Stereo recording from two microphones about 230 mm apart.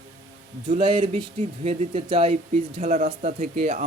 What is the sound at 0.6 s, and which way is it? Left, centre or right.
Speech, right.